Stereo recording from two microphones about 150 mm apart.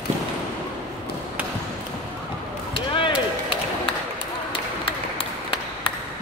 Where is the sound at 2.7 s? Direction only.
35° left (ahead or behind).